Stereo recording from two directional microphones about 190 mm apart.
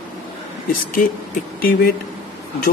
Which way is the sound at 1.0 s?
45° left (ahead or behind).